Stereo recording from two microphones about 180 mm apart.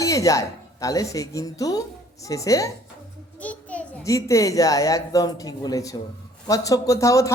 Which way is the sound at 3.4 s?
10° left (ahead or behind).